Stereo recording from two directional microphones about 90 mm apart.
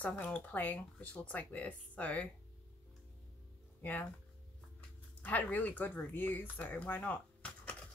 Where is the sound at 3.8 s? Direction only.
20° left (ahead or behind).